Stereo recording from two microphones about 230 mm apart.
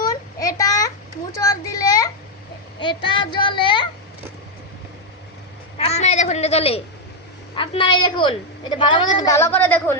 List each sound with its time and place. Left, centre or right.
0.0 s a sound: centre
1.3 s a child's voice: centre
5.7 s a woman's voice: left; by 10.0 s centre